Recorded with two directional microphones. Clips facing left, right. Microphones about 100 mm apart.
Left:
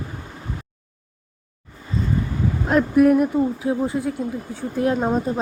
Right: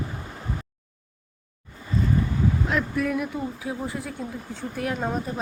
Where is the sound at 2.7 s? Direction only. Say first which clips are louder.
Left 10 dB; 50° left (ahead or behind).